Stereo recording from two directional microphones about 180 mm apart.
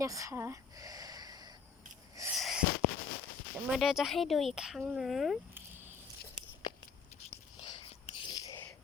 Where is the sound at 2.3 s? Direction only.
Centre (ahead or behind).